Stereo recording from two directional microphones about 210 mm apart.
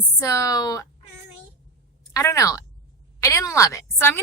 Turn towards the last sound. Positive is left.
turn(degrees=15)  # may be behind; listen again after turning